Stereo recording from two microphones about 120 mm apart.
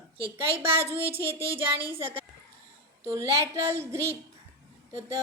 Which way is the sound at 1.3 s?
45° right (ahead or behind).